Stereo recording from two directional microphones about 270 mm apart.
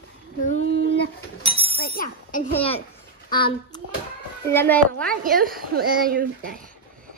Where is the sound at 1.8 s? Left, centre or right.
Left.